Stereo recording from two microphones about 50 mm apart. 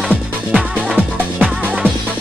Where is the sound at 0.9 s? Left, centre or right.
Right.